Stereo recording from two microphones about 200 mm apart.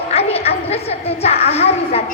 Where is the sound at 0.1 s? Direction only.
30° left (ahead or behind).